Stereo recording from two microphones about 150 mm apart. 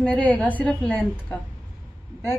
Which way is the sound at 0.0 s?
10° left (ahead or behind).